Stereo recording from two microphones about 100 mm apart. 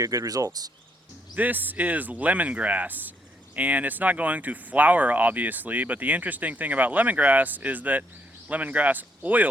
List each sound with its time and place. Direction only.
0.0 s speech: 35° right (ahead or behind)
1.4 s speech: 15° right (ahead or behind)